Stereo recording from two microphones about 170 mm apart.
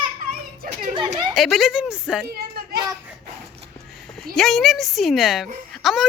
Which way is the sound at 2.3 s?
70° right (ahead or behind).